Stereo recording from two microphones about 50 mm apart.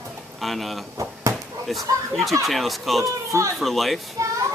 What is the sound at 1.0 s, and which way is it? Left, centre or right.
Chop, right.